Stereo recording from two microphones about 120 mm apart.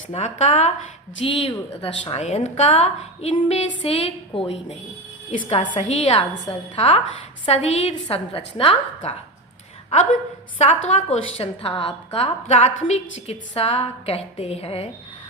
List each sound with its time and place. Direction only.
0.1 s speech: 70° left (ahead or behind)
1.2 s a woman's voice: 50° left (ahead or behind)
5.3 s a woman's voice: 90° left
5.9 s a woman's voice: 65° left (ahead or behind)
6.5 s a woman's voice: 55° left (ahead or behind)
8.1 s a woman's voice: 50° left (ahead or behind)
10.6 s a woman's voice: 65° left (ahead or behind)